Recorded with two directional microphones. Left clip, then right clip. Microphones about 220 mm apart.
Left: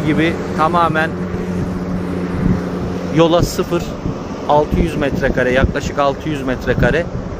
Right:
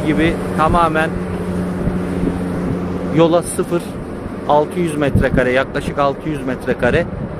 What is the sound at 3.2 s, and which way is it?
Speech, centre (ahead or behind).